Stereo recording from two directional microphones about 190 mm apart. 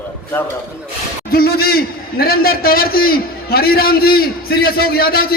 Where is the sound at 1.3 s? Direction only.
55° left (ahead or behind).